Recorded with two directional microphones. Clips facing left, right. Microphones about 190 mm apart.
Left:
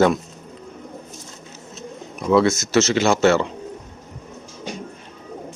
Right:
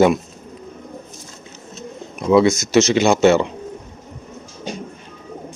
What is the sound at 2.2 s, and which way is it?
Speech, 15° right (ahead or behind).